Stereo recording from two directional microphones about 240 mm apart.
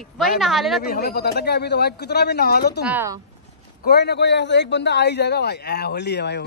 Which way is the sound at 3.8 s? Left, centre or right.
Left.